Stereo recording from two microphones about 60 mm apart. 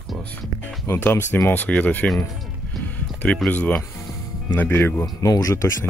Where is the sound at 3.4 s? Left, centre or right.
Left.